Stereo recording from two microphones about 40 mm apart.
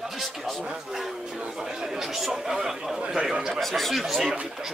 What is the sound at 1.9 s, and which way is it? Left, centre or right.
Speech, centre.